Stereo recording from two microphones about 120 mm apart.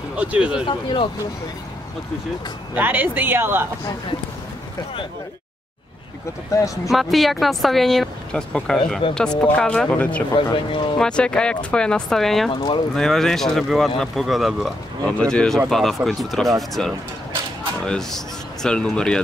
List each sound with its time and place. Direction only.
0.2 s speech: 10° right (ahead or behind)
0.7 s speech: 45° left (ahead or behind)
2.7 s speech: 15° right (ahead or behind)
6.5 s speech: 25° left (ahead or behind)
6.9 s a woman's voice: centre (ahead or behind)
10.3 s speech: 40° left (ahead or behind)
11.0 s a woman's voice: 5° left (ahead or behind)
12.4 s speech: 45° left (ahead or behind)
12.9 s speech: 5° left (ahead or behind)